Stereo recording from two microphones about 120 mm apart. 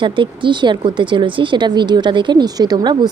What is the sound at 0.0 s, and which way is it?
A woman's voice, 45° right (ahead or behind).